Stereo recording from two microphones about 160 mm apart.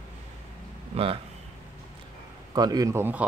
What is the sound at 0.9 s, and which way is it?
Speech, 35° right (ahead or behind).